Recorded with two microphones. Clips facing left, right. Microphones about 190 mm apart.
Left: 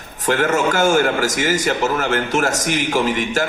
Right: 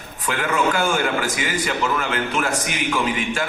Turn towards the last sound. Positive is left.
turn(degrees=40)  # may be behind; listen again after turning